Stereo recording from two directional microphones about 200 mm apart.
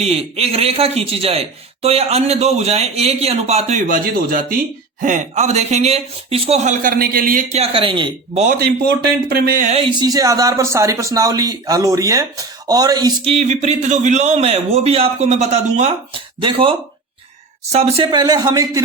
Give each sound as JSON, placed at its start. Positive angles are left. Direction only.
{"t": 0.0, "sound": "a man's voice", "side_deg": -30}
{"t": 7.6, "sound": "speech", "side_deg": -25}
{"t": 8.3, "sound": "a man's voice", "side_deg": -35}
{"t": 8.5, "sound": "speech", "side_deg": -50}
{"t": 13.3, "sound": "a man's voice", "side_deg": -35}